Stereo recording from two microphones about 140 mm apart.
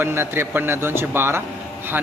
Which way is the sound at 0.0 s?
15° right (ahead or behind).